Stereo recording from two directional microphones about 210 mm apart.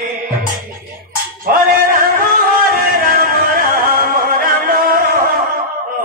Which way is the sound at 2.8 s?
40° right (ahead or behind).